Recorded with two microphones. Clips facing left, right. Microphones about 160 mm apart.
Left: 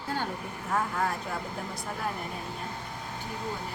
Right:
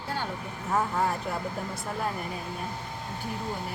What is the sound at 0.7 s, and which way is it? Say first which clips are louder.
Speech: right 3 dB; 10° right (ahead or behind).